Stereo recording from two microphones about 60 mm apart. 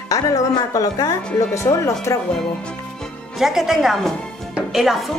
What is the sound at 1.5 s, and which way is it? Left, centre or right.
Speech, left.